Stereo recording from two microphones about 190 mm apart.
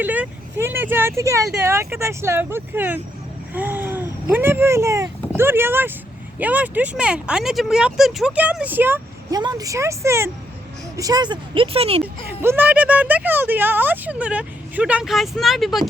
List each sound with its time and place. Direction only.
0.0 s speech: 10° right (ahead or behind); by 12.0 s 30° right (ahead or behind)
12.0 s speech: 10° right (ahead or behind)